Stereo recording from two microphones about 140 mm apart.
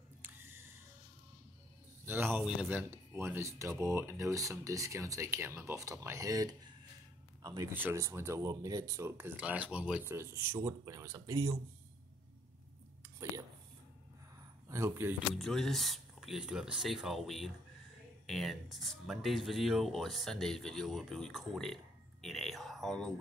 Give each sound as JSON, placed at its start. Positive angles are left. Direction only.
{"t": 0.2, "sound": "a sound", "side_deg": -15}
{"t": 2.0, "sound": "speech", "side_deg": -15}
{"t": 2.9, "sound": "speech", "side_deg": -20}
{"t": 10.0, "sound": "speech", "side_deg": -15}
{"t": 14.7, "sound": "speech", "side_deg": -20}
{"t": 15.3, "sound": "speech", "side_deg": 0}